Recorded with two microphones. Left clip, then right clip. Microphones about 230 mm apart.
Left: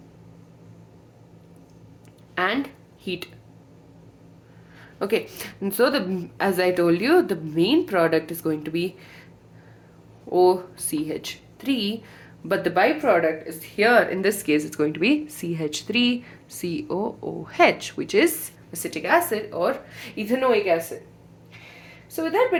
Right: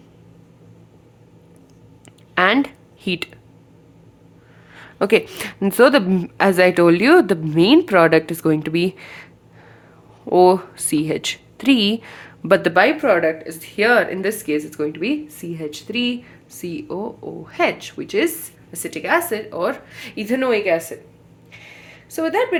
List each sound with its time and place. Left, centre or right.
2.3 s a sound: right
3.0 s speech: right
4.7 s a woman's voice: right
10.2 s a woman's voice: right
14.2 s speech: centre
18.7 s a woman's voice: centre; by 20.8 s right
22.1 s a woman's voice: right